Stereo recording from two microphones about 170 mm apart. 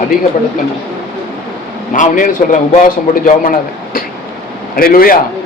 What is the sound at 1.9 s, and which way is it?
A man's voice, 50° left (ahead or behind).